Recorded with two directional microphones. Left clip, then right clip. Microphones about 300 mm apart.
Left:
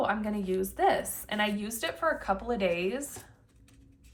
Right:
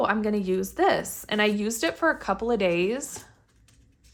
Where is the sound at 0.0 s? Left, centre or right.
Right.